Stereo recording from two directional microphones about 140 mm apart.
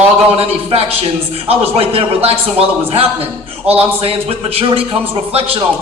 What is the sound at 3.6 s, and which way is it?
Speech, 45° right (ahead or behind).